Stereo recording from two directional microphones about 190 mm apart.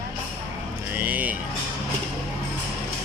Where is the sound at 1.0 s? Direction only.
10° right (ahead or behind).